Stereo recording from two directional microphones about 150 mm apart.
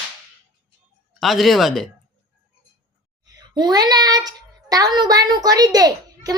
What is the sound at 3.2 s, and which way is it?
A child's voice, 30° right (ahead or behind).